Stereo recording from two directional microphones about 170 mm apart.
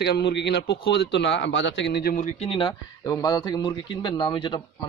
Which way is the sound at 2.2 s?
30° left (ahead or behind).